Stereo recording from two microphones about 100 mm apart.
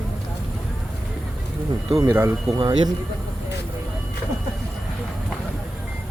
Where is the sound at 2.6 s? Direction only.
55° right (ahead or behind).